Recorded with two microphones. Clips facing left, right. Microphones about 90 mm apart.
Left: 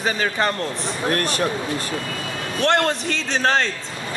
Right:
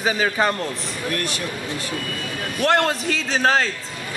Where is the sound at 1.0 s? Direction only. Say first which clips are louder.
Left 5 dB; 40° left (ahead or behind).